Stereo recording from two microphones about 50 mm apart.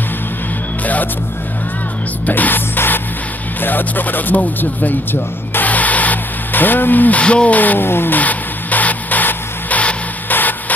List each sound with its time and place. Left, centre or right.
2.2 s music: left
3.6 s speech: left
5.7 s a sound: left
7.2 s speech: left
8.2 s music: left